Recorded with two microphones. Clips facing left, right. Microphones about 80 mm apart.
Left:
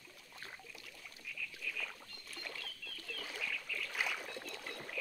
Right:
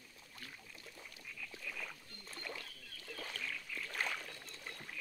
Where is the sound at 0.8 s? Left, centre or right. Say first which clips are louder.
Left 1 dB; right.